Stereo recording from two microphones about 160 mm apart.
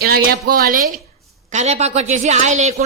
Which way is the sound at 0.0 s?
75° right (ahead or behind).